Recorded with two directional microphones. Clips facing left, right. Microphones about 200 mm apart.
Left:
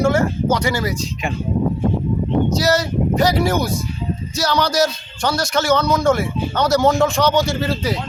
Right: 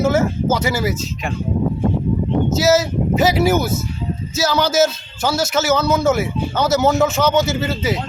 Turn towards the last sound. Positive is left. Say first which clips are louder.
# even
turn(degrees=-5)  # may be behind; listen again after turning